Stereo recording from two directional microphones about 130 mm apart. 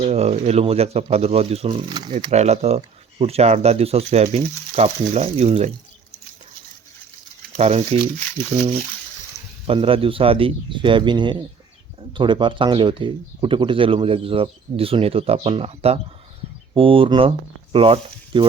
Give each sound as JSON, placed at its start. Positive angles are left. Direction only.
{"t": 0.0, "sound": "speech", "side_deg": -55}
{"t": 2.3, "sound": "speech", "side_deg": -55}
{"t": 7.5, "sound": "speech", "side_deg": -55}
{"t": 9.6, "sound": "speech", "side_deg": -45}